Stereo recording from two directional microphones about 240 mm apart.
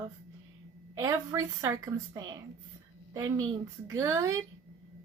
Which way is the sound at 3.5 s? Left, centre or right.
Centre.